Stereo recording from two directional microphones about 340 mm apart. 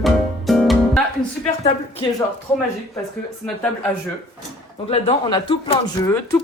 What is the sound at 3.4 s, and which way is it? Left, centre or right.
Speech, centre.